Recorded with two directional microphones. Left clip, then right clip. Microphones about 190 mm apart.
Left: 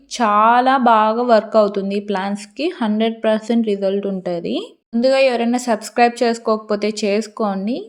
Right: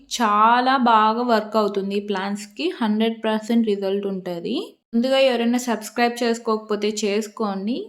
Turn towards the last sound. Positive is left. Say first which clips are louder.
# left 5 dB
turn(degrees=30)  # may be behind; listen again after turning